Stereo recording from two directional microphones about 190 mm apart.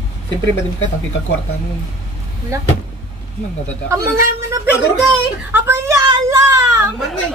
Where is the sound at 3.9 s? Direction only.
15° right (ahead or behind).